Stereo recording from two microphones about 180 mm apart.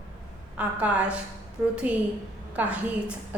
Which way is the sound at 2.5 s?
5° right (ahead or behind).